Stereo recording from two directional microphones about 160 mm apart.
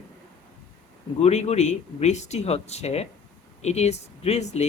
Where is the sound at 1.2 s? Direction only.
40° left (ahead or behind).